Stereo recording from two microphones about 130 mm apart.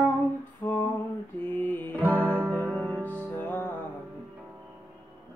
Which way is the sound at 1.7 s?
15° left (ahead or behind).